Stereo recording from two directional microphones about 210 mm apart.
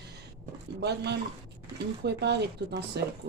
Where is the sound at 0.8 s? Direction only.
55° right (ahead or behind).